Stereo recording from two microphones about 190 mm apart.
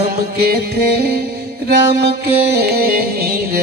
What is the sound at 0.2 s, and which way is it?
Music, 55° right (ahead or behind).